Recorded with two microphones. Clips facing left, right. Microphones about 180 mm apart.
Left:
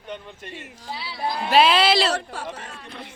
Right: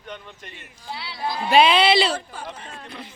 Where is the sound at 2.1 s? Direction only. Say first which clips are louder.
Left 2 dB; 80° left.